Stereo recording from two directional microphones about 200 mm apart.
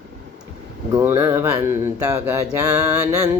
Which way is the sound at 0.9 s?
10° right (ahead or behind).